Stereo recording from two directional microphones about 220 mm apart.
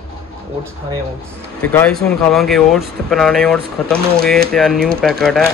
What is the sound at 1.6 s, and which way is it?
Speech, 5° left (ahead or behind).